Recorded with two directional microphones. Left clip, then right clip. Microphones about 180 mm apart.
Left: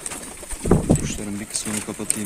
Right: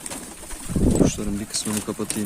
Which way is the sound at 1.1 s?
25° right (ahead or behind).